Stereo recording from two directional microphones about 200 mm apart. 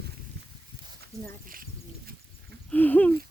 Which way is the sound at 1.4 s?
45° right (ahead or behind).